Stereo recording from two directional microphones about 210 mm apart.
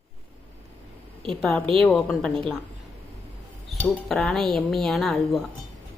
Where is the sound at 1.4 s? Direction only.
Centre (ahead or behind).